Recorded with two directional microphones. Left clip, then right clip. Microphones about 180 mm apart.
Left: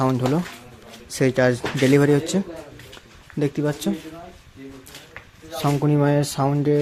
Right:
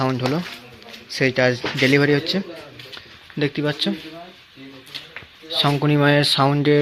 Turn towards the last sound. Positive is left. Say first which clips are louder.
# right 5 dB
turn(degrees=-10)  # may be behind; listen again after turning